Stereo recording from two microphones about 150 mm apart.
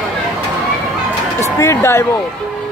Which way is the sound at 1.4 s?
20° left (ahead or behind).